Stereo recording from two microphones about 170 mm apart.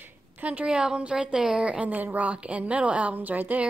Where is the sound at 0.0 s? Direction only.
10° right (ahead or behind).